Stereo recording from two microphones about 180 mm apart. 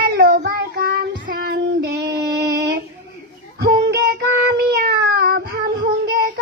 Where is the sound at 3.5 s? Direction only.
60° right (ahead or behind).